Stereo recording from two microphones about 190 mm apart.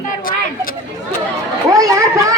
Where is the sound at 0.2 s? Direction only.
45° left (ahead or behind).